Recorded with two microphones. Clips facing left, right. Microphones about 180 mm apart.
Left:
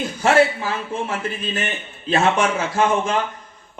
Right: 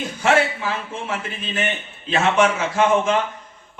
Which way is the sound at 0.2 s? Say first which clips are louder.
Left 3 dB; 40° left (ahead or behind).